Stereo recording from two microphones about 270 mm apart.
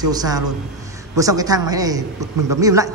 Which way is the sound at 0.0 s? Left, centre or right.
Centre.